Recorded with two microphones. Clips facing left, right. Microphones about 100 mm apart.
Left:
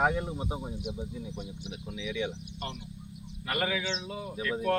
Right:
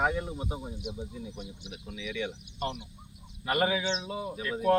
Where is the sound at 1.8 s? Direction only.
15° left (ahead or behind).